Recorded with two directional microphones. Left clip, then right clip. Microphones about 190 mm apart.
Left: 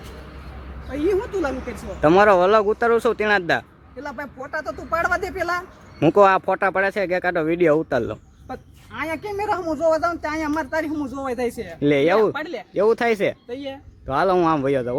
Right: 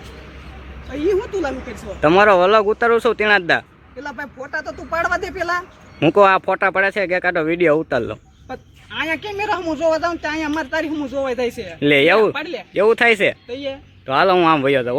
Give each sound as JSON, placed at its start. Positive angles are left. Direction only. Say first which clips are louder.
{"t": 0.9, "sound": "a woman's voice", "louder": "right 2 dB", "side_deg": 30}
{"t": 2.0, "sound": "speech", "louder": "right 2 dB", "side_deg": 5}
{"t": 4.0, "sound": "speech", "louder": "right 2 dB", "side_deg": 25}
{"t": 6.0, "sound": "speech", "louder": "right 2 dB", "side_deg": 5}
{"t": 9.4, "sound": "speech", "louder": "right 1 dB", "side_deg": 30}
{"t": 11.8, "sound": "speech", "louder": "right 4 dB", "side_deg": 5}
{"t": 12.3, "sound": "speech", "louder": "right 3 dB", "side_deg": 20}
{"t": 12.7, "sound": "speech", "louder": "right 5 dB", "side_deg": 0}
{"t": 13.5, "sound": "speech", "louder": "right 5 dB", "side_deg": 25}
{"t": 14.1, "sound": "speech", "louder": "right 5 dB", "side_deg": 5}